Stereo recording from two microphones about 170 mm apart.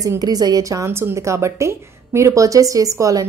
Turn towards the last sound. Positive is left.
turn(degrees=-20)  # may be behind; listen again after turning